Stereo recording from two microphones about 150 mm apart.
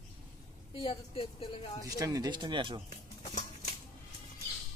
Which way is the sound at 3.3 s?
50° left (ahead or behind).